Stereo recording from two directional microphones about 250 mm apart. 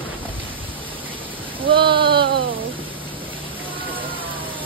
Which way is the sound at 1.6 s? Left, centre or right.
Centre.